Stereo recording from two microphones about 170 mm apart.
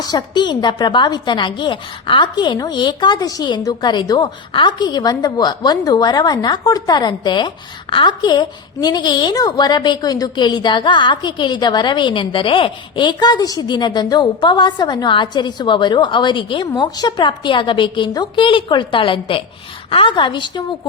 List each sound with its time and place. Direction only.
0.0 s a woman's voice: 25° left (ahead or behind)